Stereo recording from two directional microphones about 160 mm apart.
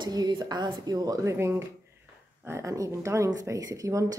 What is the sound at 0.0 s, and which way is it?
A woman's voice, 25° right (ahead or behind).